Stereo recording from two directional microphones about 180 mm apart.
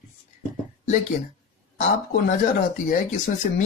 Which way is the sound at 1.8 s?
60° left (ahead or behind).